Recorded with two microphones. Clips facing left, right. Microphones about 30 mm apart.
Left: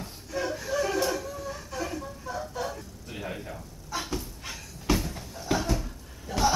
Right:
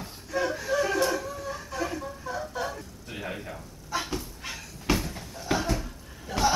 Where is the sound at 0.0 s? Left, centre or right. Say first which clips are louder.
Right 3 dB; centre.